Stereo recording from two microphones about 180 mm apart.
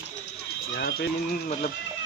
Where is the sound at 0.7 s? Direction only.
60° left (ahead or behind).